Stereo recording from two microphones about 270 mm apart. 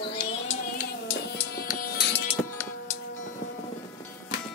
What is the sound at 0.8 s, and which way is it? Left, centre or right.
Music, left.